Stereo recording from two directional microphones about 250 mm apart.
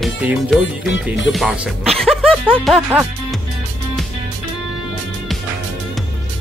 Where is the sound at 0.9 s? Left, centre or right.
Left.